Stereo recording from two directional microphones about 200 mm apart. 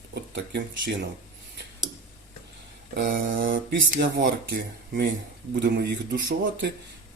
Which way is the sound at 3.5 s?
45° right (ahead or behind).